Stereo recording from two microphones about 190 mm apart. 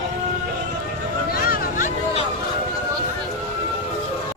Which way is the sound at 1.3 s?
50° left (ahead or behind).